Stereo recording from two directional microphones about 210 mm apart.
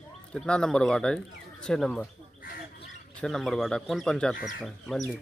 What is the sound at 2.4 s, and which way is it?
Bird, 45° left (ahead or behind).